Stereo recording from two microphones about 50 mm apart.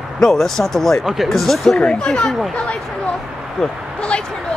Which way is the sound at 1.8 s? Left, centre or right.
Left.